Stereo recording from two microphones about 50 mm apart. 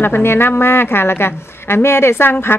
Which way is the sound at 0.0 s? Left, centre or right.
Left.